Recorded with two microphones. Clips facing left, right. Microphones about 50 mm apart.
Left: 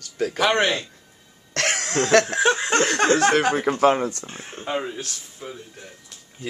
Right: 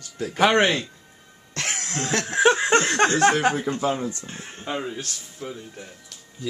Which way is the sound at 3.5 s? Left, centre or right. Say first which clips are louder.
Left 6 dB; left.